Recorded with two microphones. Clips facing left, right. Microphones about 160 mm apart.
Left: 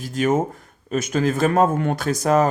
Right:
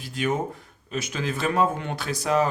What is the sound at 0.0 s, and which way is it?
Speech, 45° left (ahead or behind).